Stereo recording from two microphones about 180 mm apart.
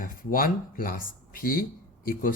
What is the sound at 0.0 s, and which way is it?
Speech, 50° left (ahead or behind).